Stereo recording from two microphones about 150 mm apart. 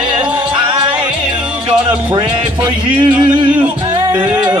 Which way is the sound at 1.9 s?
35° right (ahead or behind).